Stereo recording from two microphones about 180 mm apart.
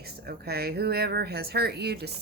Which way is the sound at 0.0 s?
60° right (ahead or behind).